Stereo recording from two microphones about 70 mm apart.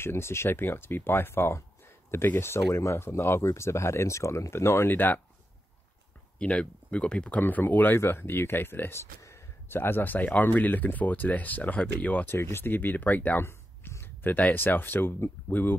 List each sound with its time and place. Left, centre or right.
0.0 s speech: left
6.3 s speech: centre
12.3 s speech: left
13.4 s speech: left